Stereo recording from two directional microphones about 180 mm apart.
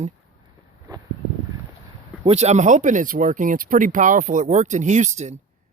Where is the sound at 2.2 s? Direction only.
40° right (ahead or behind).